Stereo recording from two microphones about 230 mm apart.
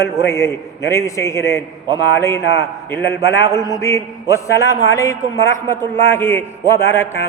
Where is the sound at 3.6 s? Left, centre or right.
Centre.